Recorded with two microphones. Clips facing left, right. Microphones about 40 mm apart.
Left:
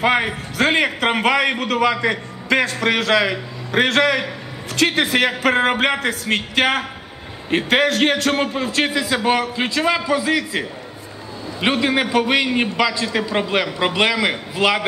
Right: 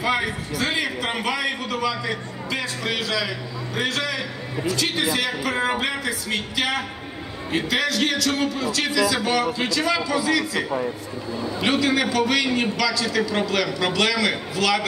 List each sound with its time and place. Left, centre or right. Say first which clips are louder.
0.0 s a man's voice: left 5 dB; left
11.6 s a man's voice: left 3 dB; left